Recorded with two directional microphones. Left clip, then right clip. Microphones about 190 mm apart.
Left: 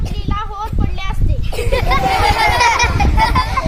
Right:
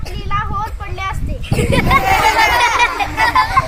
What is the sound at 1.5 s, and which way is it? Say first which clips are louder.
Speech: right 2 dB; 25° right (ahead or behind).